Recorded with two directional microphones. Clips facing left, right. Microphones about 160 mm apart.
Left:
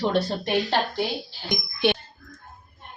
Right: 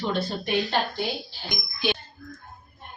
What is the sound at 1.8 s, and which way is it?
Speech, 65° left (ahead or behind).